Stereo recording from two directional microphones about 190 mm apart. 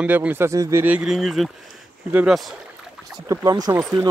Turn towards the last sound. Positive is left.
turn(degrees=-20)  # may be behind; listen again after turning